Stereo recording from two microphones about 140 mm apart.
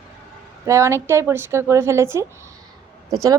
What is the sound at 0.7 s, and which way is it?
Speech, 20° right (ahead or behind).